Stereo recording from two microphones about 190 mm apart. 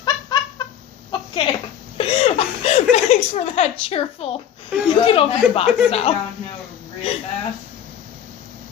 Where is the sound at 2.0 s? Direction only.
30° left (ahead or behind).